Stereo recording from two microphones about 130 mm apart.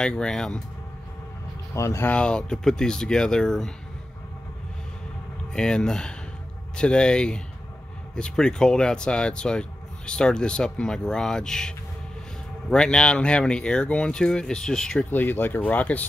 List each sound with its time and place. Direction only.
0.0 s speech: 5° left (ahead or behind)
1.7 s speech: 20° left (ahead or behind)
2.1 s speech: 5° left (ahead or behind)
5.5 s speech: 5° left (ahead or behind)
15.0 s speech: 15° left (ahead or behind)